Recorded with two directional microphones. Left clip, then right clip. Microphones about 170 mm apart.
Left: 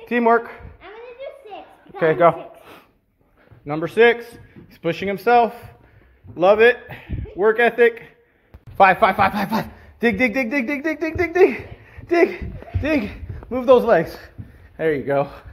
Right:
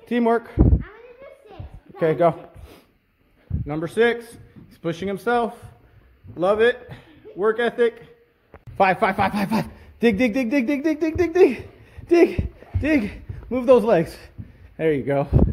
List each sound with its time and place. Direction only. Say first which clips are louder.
0.0 s speech: left 4 dB; 25° right (ahead or behind)
1.5 s a sound: left 8 dB; 30° right (ahead or behind)
3.6 s a man's voice: left 5 dB; 15° right (ahead or behind)
8.7 s a man's voice: left 5 dB; 30° right (ahead or behind)